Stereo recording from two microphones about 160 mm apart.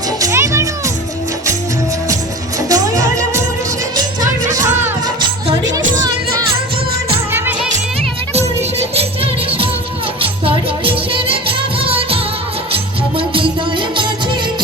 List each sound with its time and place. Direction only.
0.2 s music: 20° right (ahead or behind)
2.6 s music: 20° right (ahead or behind)
4.6 s music: 25° right (ahead or behind)
8.3 s music: 40° right (ahead or behind)